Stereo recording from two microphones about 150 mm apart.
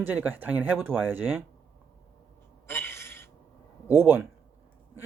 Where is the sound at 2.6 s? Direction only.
15° left (ahead or behind).